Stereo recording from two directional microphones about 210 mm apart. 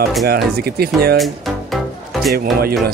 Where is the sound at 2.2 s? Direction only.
45° right (ahead or behind).